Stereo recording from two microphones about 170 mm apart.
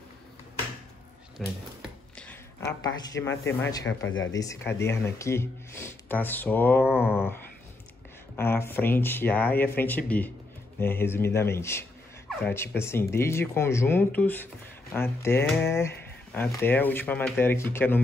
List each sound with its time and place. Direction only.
1.4 s a sound: 5° left (ahead or behind)
2.6 s speech: 20° left (ahead or behind)
8.4 s speech: 15° left (ahead or behind)